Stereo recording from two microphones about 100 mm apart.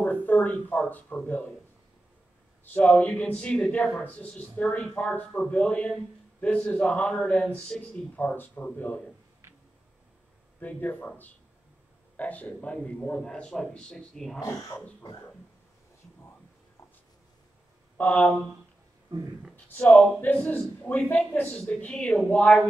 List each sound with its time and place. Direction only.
0.0 s speech: 15° left (ahead or behind)
2.6 s a man's voice: 15° left (ahead or behind)
10.6 s a man's voice: 15° left (ahead or behind)
17.9 s a man's voice: 15° left (ahead or behind)
19.5 s a man's voice: 10° left (ahead or behind)